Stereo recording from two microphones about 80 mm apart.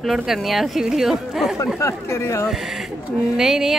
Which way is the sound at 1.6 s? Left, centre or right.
Left.